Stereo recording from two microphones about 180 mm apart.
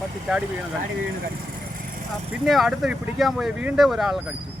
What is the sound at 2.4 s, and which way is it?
Speech, centre (ahead or behind).